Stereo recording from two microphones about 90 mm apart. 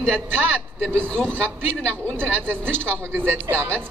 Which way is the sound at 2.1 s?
25° right (ahead or behind).